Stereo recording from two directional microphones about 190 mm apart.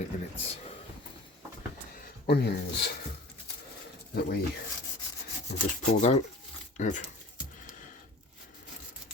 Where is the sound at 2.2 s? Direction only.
60° left (ahead or behind).